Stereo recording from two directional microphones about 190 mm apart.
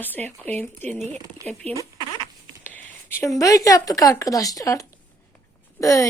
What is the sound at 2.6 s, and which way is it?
A woman's voice, 10° left (ahead or behind).